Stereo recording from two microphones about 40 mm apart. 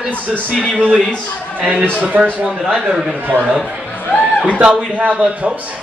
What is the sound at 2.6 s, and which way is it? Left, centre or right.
Speech, centre.